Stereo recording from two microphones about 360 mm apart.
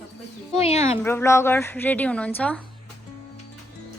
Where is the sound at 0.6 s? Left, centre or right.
Centre.